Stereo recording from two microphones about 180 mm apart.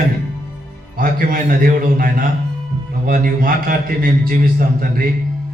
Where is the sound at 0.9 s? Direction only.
50° right (ahead or behind).